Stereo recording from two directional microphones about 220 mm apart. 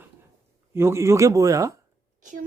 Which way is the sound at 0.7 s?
10° right (ahead or behind).